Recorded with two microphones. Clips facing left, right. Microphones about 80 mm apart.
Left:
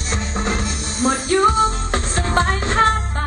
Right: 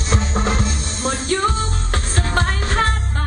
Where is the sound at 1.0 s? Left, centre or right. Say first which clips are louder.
Left 4 dB; centre.